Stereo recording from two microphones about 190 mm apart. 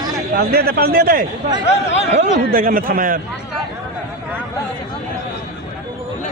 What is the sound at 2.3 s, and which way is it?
Speech, 45° right (ahead or behind).